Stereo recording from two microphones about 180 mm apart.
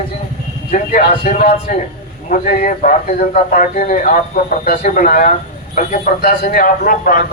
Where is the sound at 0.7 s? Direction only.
45° left (ahead or behind).